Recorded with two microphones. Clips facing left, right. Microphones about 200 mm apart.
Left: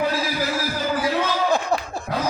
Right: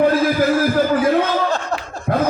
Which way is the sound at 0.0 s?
55° right (ahead or behind).